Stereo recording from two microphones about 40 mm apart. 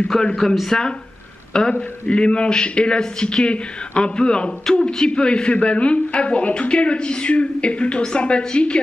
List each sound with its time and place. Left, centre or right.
0.4 s a man's voice: centre; by 8.8 s left